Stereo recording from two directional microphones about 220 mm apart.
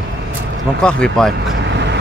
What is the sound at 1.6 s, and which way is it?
Vehicle, 50° right (ahead or behind).